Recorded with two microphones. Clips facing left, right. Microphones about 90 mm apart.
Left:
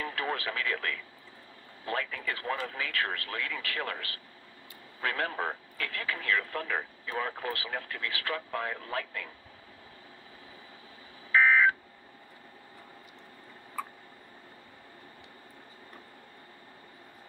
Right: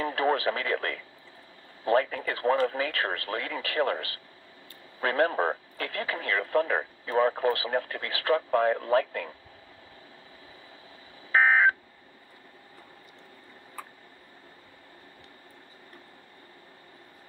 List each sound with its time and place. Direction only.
0.0 s speech: 30° right (ahead or behind)
11.3 s telephone dialing: 30° right (ahead or behind)